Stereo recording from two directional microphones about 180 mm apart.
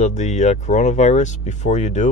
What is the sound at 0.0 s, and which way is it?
Speech, 40° left (ahead or behind).